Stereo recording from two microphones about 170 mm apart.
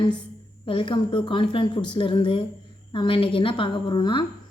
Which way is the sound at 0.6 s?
30° left (ahead or behind).